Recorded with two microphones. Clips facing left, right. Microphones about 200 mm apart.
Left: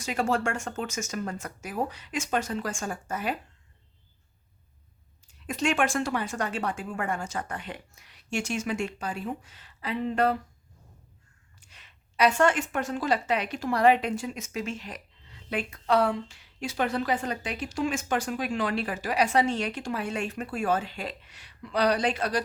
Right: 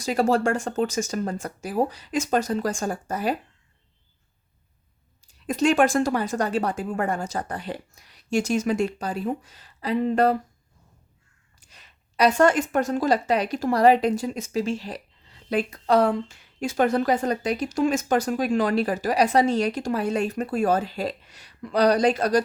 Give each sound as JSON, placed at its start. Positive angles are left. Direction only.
{"t": 0.0, "sound": "a woman's voice", "side_deg": -35}
{"t": 5.3, "sound": "a woman's voice", "side_deg": -35}
{"t": 11.6, "sound": "a woman's voice", "side_deg": -40}